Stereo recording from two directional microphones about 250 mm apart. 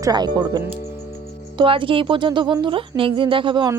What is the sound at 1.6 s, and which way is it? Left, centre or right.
Speech, right.